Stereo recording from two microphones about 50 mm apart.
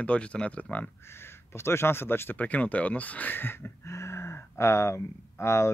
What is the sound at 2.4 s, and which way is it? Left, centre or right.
Speech, left.